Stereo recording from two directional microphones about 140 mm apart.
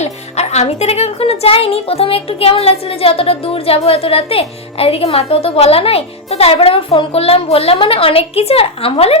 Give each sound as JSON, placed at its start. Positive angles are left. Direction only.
{"t": 0.0, "sound": "speech", "side_deg": 50}